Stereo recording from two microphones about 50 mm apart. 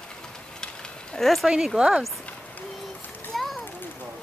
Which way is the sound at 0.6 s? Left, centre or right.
Centre.